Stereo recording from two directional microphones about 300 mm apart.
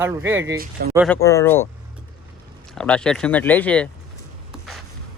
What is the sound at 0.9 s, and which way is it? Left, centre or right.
Speech, centre.